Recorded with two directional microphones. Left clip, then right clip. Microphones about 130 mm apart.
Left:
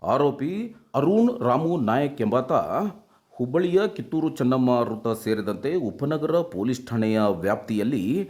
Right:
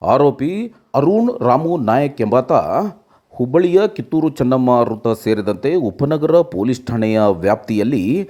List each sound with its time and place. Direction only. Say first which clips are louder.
0.0 s speech: right 9 dB; 35° right (ahead or behind)